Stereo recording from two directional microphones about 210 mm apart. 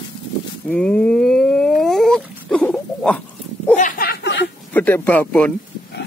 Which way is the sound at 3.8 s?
40° left (ahead or behind).